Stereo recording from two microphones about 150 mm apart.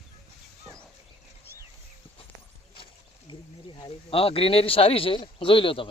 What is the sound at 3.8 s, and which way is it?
Speech, 40° left (ahead or behind).